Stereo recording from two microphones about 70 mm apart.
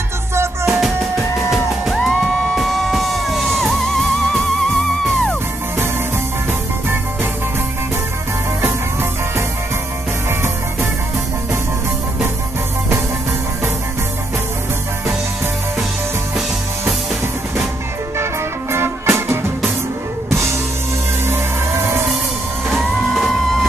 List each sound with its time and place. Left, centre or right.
0.7 s music: centre
18.1 s music: right
22.7 s music: centre